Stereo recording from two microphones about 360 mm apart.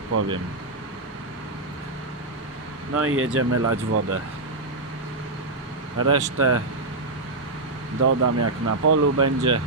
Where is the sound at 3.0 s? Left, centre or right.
Right.